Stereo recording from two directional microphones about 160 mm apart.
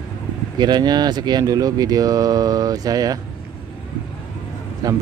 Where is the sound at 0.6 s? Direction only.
25° right (ahead or behind).